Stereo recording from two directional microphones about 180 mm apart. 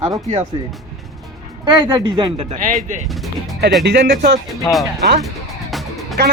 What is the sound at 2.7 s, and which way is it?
Speech, 45° right (ahead or behind).